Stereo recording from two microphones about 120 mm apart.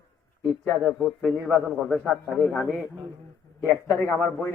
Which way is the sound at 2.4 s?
10° left (ahead or behind).